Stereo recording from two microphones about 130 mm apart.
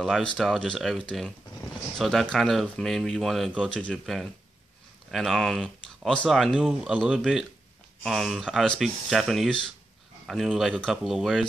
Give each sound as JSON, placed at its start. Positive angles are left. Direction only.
{"t": 0.0, "sound": "speech", "side_deg": 5}